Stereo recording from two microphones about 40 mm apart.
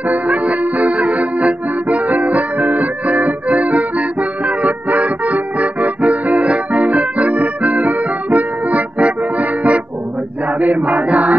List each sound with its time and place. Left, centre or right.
0.1 s music: right
10.6 s chant: right